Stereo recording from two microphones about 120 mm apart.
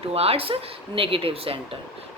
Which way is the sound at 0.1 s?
55° right (ahead or behind).